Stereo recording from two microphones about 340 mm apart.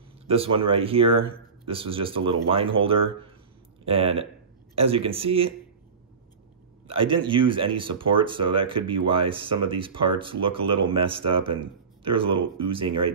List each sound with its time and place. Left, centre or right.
0.3 s speech: centre
3.8 s speech: centre
6.9 s speech: centre